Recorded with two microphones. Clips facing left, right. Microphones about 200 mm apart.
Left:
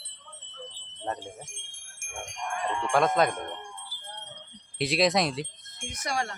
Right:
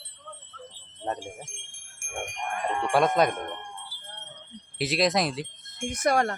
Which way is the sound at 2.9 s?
15° right (ahead or behind).